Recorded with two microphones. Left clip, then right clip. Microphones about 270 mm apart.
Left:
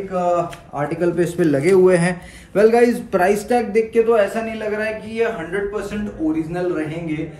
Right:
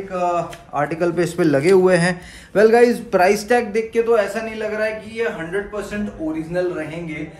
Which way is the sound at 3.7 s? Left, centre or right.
Centre.